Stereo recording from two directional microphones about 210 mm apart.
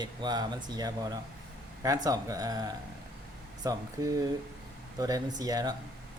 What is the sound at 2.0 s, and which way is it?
Speech, 15° right (ahead or behind).